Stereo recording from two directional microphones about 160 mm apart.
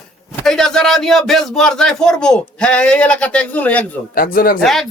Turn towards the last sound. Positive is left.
turn(degrees=0)  # may be behind; listen again after turning